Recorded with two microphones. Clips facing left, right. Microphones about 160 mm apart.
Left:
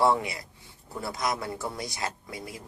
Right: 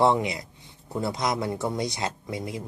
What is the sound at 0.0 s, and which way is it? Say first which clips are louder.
Speech: right 3 dB; 20° right (ahead or behind).